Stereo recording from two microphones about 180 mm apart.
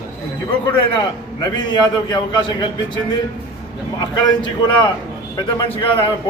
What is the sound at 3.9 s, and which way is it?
A man's voice, 25° left (ahead or behind).